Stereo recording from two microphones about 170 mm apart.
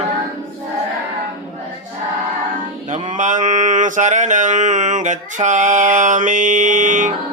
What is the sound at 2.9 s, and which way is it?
Mantra, 45° right (ahead or behind).